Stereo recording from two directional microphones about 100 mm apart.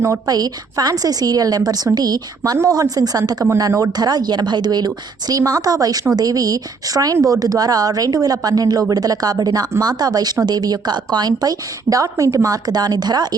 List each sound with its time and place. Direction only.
0.3 s a woman's voice: 40° right (ahead or behind)